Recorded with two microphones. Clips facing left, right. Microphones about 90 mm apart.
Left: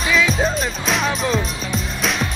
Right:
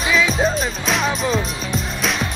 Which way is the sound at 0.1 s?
Centre (ahead or behind).